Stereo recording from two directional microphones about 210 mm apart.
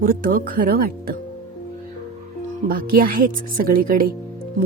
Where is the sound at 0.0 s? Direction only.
40° right (ahead or behind).